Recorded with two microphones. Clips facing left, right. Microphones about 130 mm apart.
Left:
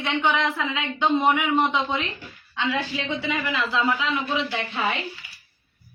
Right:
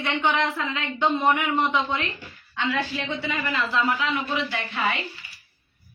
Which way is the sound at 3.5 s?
15° left (ahead or behind).